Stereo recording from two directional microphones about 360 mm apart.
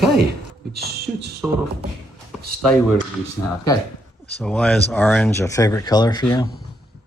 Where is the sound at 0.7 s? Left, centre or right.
Right.